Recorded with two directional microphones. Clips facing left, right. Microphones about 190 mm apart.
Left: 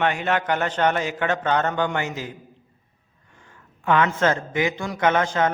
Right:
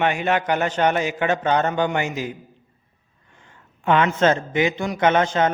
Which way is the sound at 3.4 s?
20° right (ahead or behind).